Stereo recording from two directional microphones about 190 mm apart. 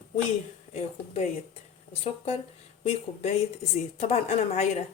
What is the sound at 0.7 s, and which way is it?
A woman's voice, 35° left (ahead or behind).